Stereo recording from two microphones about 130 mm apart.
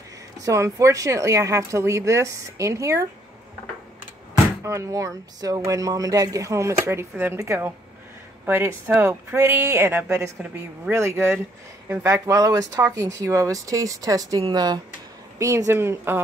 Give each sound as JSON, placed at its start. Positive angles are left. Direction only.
{"t": 0.4, "sound": "speech", "side_deg": -25}
{"t": 4.6, "sound": "speech", "side_deg": -25}